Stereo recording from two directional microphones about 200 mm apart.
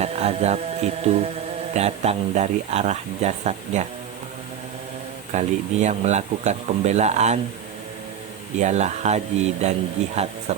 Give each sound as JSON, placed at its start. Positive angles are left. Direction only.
{"t": 0.0, "sound": "music", "side_deg": -30}
{"t": 1.7, "sound": "speech", "side_deg": -35}
{"t": 5.3, "sound": "speech", "side_deg": -35}
{"t": 8.5, "sound": "speech", "side_deg": -35}